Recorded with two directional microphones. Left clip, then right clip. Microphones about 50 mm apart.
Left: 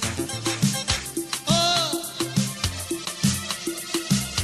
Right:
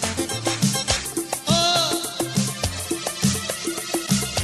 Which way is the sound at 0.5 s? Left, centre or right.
Left.